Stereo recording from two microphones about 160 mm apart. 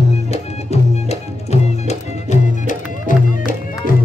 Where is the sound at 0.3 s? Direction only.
40° left (ahead or behind).